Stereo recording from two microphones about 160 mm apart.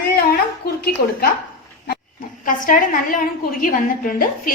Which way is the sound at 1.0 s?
70° left (ahead or behind).